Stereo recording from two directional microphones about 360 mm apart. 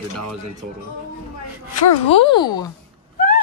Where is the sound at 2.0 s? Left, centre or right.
Centre.